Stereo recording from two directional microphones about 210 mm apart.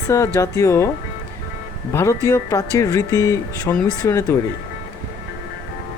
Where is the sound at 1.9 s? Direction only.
15° left (ahead or behind).